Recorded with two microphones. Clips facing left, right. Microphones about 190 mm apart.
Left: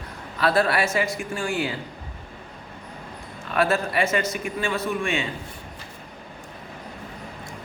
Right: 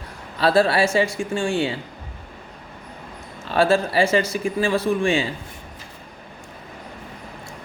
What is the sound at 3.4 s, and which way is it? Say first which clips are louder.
A man's voice: right 4 dB; 30° right (ahead or behind).